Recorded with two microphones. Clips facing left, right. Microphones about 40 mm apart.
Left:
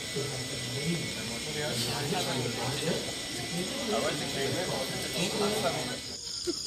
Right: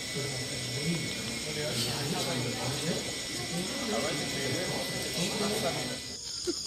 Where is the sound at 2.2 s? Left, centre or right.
Centre.